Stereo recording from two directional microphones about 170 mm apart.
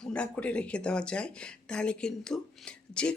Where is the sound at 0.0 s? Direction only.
5° left (ahead or behind).